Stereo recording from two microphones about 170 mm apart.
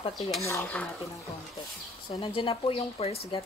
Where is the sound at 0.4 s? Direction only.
15° left (ahead or behind).